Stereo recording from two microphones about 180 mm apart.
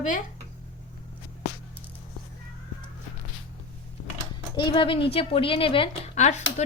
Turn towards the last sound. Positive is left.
turn(degrees=40)  # may be behind; listen again after turning